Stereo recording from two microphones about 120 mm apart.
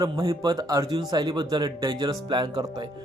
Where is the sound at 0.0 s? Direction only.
35° right (ahead or behind).